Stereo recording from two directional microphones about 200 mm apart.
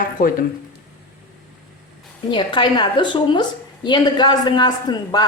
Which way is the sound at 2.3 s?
25° left (ahead or behind).